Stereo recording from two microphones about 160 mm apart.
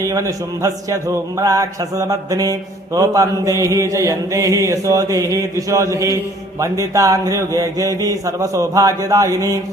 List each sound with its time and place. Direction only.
0.0 s a man's voice: 20° right (ahead or behind)